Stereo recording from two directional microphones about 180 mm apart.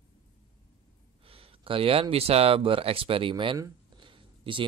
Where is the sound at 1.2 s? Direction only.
30° right (ahead or behind).